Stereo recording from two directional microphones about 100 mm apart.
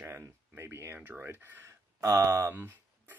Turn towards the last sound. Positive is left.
turn(degrees=-20)  # may be behind; listen again after turning